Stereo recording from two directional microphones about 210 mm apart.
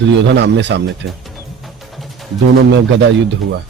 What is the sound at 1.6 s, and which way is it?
Music, centre (ahead or behind).